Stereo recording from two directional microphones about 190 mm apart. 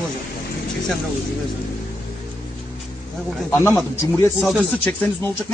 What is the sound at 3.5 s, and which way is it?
Speech, 10° left (ahead or behind).